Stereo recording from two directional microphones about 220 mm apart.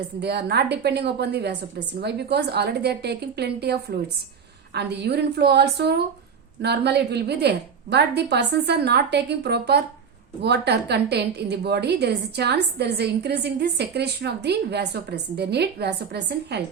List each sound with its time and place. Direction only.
0.2 s a woman's voice: 45° right (ahead or behind)